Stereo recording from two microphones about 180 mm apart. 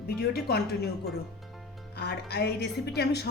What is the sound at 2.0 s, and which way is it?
A woman's voice, 65° left (ahead or behind).